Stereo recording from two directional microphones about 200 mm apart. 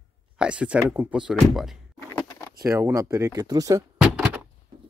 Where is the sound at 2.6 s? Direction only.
15° right (ahead or behind).